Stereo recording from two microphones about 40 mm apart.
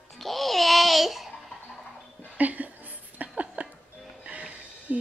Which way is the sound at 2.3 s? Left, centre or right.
Right.